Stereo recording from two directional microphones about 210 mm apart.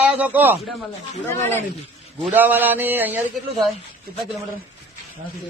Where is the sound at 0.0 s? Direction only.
5° right (ahead or behind).